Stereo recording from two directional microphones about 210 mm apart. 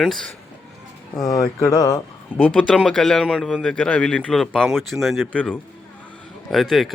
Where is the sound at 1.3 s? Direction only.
15° left (ahead or behind).